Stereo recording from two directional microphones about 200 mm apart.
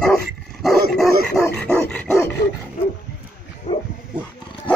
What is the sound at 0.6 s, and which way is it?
Dog, centre (ahead or behind).